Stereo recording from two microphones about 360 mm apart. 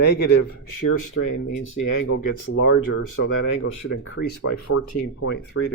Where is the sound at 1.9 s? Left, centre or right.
Left.